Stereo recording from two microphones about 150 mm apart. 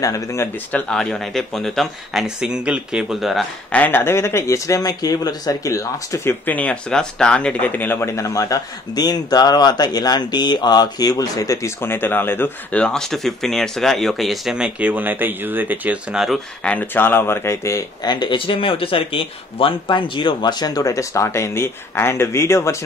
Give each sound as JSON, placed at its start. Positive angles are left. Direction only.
{"t": 0.0, "sound": "speech", "side_deg": 20}
{"t": 3.7, "sound": "speech", "side_deg": 10}
{"t": 16.6, "sound": "speech", "side_deg": 10}